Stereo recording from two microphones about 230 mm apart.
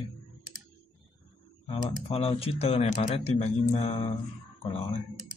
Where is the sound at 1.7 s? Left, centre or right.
Left.